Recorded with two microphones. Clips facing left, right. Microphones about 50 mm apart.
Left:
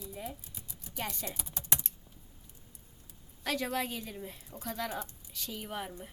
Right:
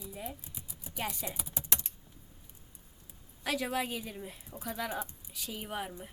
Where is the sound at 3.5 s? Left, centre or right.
Centre.